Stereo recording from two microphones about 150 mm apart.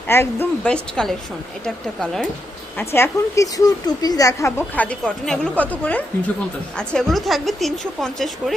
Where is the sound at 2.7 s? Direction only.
15° left (ahead or behind).